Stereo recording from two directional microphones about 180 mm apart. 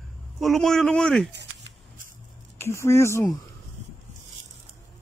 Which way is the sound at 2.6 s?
15° left (ahead or behind).